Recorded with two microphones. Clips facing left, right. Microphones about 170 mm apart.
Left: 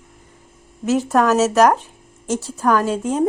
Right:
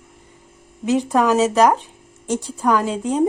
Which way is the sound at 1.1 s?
10° right (ahead or behind).